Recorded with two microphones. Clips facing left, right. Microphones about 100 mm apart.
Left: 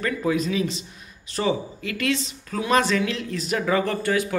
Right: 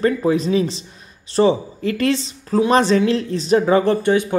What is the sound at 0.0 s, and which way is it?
Speech, 30° right (ahead or behind).